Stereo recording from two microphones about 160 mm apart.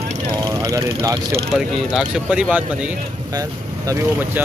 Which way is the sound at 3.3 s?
25° right (ahead or behind).